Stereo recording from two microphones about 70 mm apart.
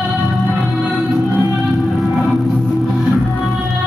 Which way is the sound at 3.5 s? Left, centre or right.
Centre.